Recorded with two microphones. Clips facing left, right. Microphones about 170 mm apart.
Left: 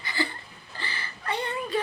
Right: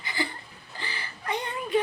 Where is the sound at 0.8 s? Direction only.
15° right (ahead or behind).